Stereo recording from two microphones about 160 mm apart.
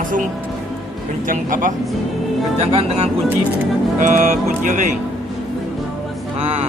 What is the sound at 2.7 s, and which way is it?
Speech, 40° right (ahead or behind).